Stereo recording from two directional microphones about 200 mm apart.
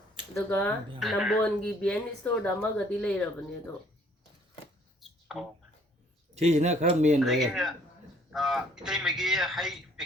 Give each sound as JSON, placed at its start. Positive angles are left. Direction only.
{"t": 0.3, "sound": "speech", "side_deg": 10}
{"t": 0.9, "sound": "speech", "side_deg": 0}
{"t": 4.9, "sound": "a sound", "side_deg": 0}
{"t": 6.3, "sound": "speech", "side_deg": -35}
{"t": 7.2, "sound": "speech", "side_deg": 0}